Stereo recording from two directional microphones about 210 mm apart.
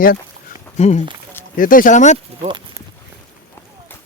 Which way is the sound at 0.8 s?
30° left (ahead or behind).